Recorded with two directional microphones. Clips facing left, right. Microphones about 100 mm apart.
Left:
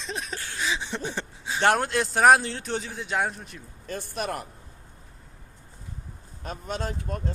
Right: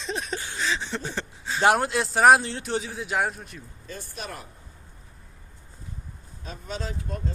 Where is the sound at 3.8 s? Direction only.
60° left (ahead or behind).